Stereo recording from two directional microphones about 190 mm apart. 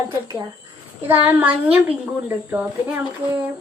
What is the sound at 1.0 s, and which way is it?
A woman's voice, 10° right (ahead or behind).